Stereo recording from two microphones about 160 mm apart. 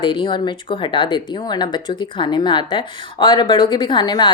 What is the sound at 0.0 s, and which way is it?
Speech, 30° left (ahead or behind).